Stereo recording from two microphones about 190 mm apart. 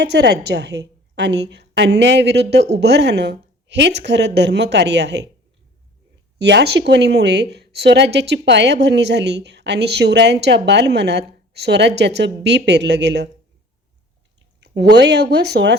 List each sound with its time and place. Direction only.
0.0 s a woman's voice: 60° right (ahead or behind)
6.4 s a woman's voice: 65° right (ahead or behind)
14.8 s a woman's voice: 60° right (ahead or behind)